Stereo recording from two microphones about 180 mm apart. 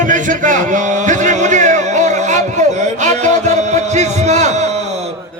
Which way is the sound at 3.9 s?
40° right (ahead or behind).